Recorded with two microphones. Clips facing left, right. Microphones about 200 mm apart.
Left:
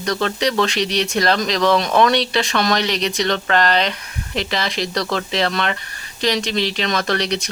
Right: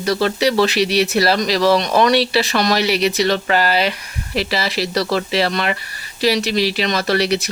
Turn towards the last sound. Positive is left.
turn(degrees=-5)  # may be behind; listen again after turning